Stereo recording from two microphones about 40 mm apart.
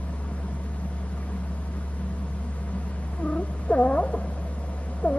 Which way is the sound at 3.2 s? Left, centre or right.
Left.